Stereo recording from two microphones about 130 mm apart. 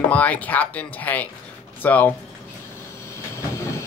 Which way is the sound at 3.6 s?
20° left (ahead or behind).